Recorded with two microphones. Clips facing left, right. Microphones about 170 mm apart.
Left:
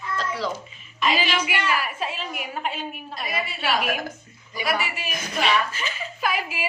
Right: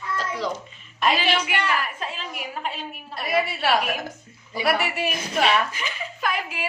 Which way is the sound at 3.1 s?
65° right (ahead or behind).